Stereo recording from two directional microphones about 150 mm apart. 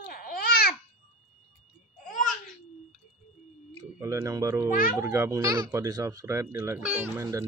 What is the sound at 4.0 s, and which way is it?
A child's voice, 20° right (ahead or behind).